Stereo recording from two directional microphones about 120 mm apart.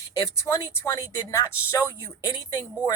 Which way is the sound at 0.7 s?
30° left (ahead or behind).